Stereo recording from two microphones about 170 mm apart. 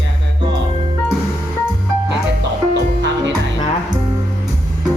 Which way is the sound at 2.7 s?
90° right.